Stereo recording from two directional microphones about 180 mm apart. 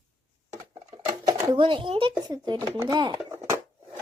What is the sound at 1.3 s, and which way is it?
Speech, 25° right (ahead or behind).